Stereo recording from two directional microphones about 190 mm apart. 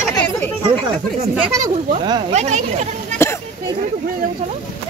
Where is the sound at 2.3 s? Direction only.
40° right (ahead or behind).